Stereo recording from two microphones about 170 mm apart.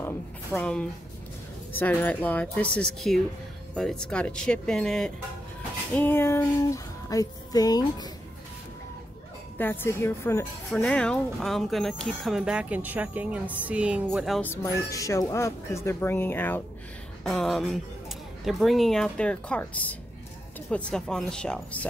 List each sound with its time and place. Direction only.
0.0 s a sound: 10° left (ahead or behind)
1.7 s speech: 10° left (ahead or behind)
5.9 s speech: 15° left (ahead or behind)
9.6 s speech: 10° left (ahead or behind)
14.4 s speech: 15° left (ahead or behind)
17.2 s speech: centre (ahead or behind)